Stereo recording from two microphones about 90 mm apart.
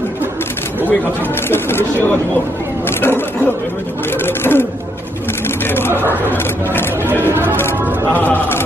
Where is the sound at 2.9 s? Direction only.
25° left (ahead or behind).